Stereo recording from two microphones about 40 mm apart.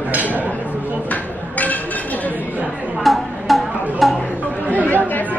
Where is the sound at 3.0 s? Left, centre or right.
Centre.